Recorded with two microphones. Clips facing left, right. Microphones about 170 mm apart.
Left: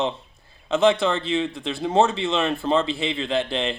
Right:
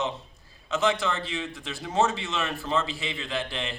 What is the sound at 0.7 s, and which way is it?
A man's voice, 25° left (ahead or behind).